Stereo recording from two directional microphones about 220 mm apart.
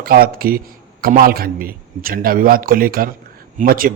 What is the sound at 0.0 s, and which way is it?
A man's voice, 40° right (ahead or behind).